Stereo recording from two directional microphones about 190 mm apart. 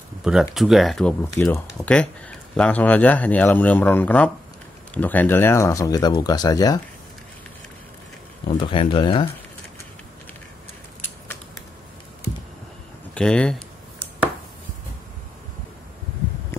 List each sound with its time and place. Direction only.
0.2 s speech: 5° right (ahead or behind)
1.2 s speech: 15° left (ahead or behind)
1.7 s speech: 5° left (ahead or behind); by 6.8 s 20° left (ahead or behind)
8.5 s speech: 25° left (ahead or behind)
13.1 s speech: 5° left (ahead or behind)